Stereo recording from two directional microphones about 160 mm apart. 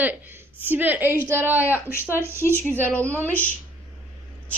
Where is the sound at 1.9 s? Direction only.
15° left (ahead or behind).